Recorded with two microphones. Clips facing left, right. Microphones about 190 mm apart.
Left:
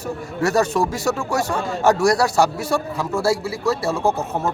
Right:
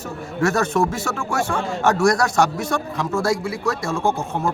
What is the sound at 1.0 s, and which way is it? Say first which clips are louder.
Speech: left 2 dB; 40° left (ahead or behind).